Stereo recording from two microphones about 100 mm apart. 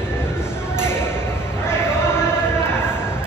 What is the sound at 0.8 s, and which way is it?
Ping, 25° left (ahead or behind).